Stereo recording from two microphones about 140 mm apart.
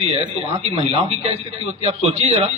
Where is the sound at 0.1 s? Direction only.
50° right (ahead or behind).